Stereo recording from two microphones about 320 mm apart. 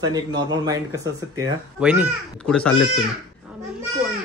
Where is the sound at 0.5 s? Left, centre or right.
Centre.